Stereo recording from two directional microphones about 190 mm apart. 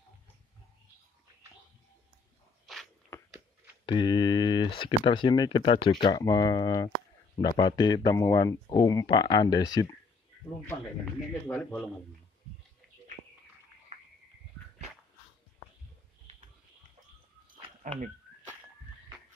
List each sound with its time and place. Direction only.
2.6 s biting: centre (ahead or behind)
3.8 s speech: 25° left (ahead or behind)
11.4 s speech: 10° left (ahead or behind)
13.9 s a sound: 35° right (ahead or behind)
17.8 s speech: 45° right (ahead or behind)